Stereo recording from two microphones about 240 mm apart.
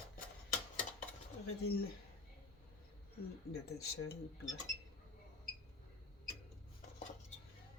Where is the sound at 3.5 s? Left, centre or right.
Left.